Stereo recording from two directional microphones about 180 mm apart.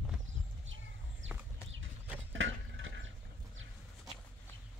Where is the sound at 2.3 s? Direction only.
90° right.